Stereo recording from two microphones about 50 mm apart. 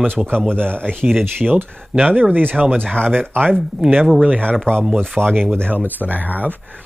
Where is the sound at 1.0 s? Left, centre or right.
Centre.